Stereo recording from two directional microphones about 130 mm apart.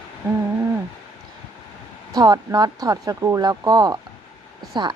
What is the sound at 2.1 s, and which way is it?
Speech, 30° right (ahead or behind).